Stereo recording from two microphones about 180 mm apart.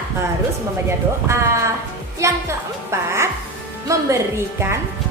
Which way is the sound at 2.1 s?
15° right (ahead or behind).